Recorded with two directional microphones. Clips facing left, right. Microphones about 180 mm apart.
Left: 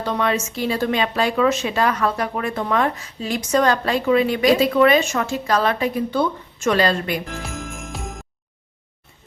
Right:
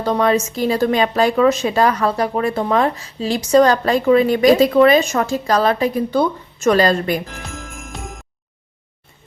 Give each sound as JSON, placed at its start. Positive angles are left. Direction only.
{"t": 0.0, "sound": "speech", "side_deg": -40}
{"t": 7.8, "sound": "jingle bell", "side_deg": 0}